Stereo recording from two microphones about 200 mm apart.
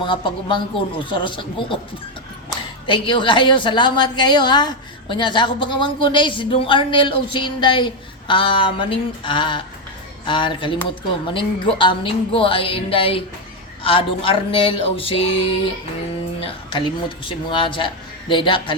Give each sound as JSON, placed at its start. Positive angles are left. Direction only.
{"t": 0.0, "sound": "a woman's voice", "side_deg": 25}
{"t": 2.8, "sound": "a woman's voice", "side_deg": 25}